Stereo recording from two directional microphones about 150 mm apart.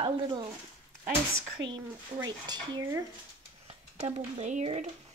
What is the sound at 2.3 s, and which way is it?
Speech, 30° right (ahead or behind).